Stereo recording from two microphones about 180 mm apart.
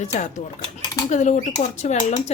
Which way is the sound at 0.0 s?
45° left (ahead or behind).